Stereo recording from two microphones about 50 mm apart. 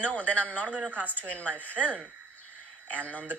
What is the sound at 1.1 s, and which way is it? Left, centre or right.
Speech, left.